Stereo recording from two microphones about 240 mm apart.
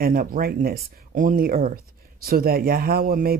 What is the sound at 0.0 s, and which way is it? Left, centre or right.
Speech, right.